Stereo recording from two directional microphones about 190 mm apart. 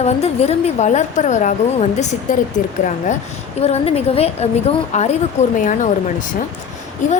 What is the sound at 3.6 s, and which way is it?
A woman's voice, 35° left (ahead or behind).